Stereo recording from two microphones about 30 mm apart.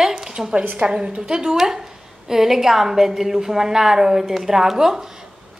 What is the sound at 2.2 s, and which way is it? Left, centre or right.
Speech, centre.